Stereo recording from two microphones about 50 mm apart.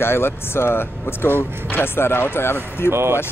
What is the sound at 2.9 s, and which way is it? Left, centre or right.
Speech, right.